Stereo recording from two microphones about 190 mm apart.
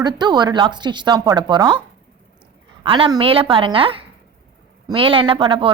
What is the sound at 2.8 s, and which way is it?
A woman's voice, 25° right (ahead or behind).